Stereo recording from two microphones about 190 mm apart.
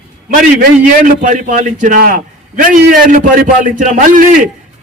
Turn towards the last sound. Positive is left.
turn(degrees=-45)  # may be behind; listen again after turning